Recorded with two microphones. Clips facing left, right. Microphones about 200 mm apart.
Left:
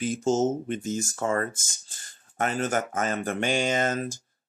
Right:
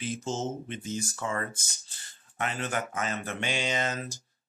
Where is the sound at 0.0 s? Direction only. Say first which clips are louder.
Left 9 dB; 45° left (ahead or behind).